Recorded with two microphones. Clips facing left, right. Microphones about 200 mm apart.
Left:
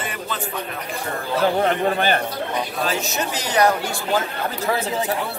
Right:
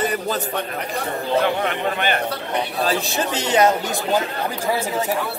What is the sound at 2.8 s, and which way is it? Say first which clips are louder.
Speech: right 2 dB; 35° right (ahead or behind).